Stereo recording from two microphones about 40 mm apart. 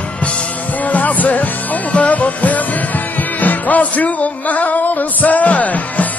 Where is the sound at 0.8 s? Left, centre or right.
Left.